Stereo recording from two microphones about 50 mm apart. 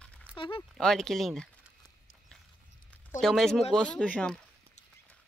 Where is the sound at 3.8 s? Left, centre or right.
Left.